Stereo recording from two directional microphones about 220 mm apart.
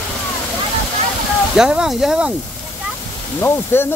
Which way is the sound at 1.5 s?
5° right (ahead or behind).